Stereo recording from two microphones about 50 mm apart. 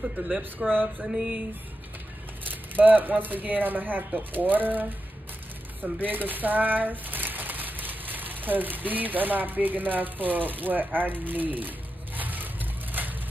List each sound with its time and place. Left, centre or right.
0.2 s speech: right
1.1 s music: right
2.7 s speech: right
12.2 s vehicle: right